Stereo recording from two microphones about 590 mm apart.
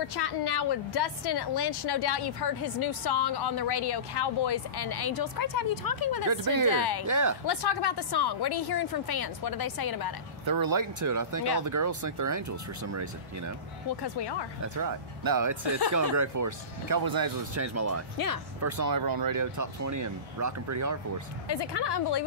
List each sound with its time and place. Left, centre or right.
0.1 s speech: left
6.2 s speech: right
6.7 s speech: left
7.1 s speech: right
7.4 s speech: left
10.4 s speech: right
14.6 s speech: right
18.1 s speech: left
18.6 s speech: right
21.5 s speech: left